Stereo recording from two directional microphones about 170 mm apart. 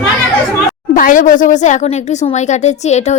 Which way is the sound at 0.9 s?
50° left (ahead or behind).